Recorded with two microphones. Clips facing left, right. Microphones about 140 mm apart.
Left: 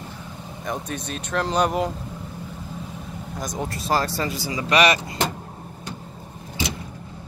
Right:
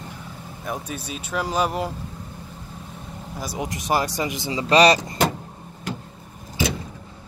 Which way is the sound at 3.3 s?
10° right (ahead or behind).